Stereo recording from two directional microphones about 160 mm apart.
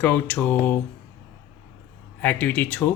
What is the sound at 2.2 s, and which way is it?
Speech, 10° left (ahead or behind).